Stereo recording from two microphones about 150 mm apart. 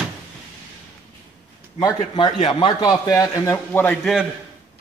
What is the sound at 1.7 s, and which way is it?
A man's voice, 30° left (ahead or behind).